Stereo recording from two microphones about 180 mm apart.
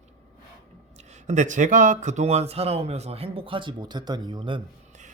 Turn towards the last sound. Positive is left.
turn(degrees=-25)  # may be behind; listen again after turning